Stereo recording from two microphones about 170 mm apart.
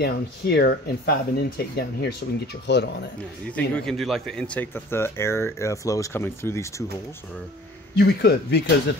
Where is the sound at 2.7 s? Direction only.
85° left.